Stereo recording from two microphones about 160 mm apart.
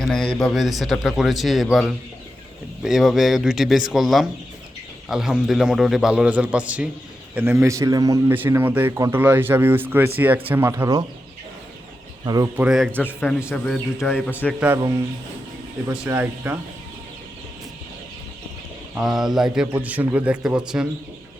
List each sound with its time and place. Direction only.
0.0 s a man's voice: 5° left (ahead or behind); by 11.0 s 20° right (ahead or behind)
12.2 s speech: 25° right (ahead or behind)
12.5 s a man's voice: 5° right (ahead or behind)
13.0 s a man's voice: 10° left (ahead or behind)
16.0 s a man's voice: 15° right (ahead or behind)
18.9 s a man's voice: centre (ahead or behind)